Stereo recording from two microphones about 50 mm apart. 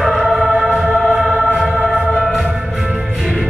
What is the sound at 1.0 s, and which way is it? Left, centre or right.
Music, centre.